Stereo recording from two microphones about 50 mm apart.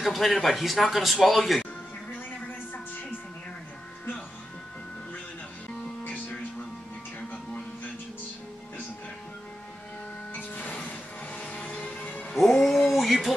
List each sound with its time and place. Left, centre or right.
0.0 s speech: centre
10.3 s music: left
12.6 s a sound: centre